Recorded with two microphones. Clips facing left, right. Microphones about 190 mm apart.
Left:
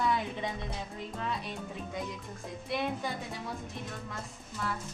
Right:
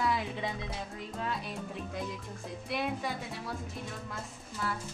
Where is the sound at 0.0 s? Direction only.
Centre (ahead or behind).